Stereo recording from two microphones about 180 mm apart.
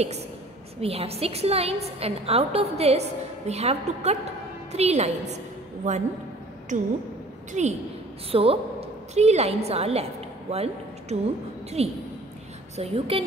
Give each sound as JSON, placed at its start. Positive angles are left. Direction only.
{"t": 0.7, "sound": "a woman's voice", "side_deg": -35}
{"t": 7.5, "sound": "a woman's voice", "side_deg": -40}